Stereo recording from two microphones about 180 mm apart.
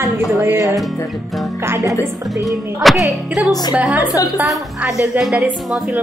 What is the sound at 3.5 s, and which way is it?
Speech, 20° left (ahead or behind).